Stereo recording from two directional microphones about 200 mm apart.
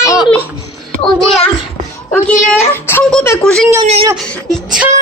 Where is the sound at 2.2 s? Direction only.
10° left (ahead or behind).